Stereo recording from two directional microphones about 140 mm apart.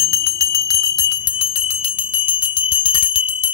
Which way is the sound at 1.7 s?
40° left (ahead or behind).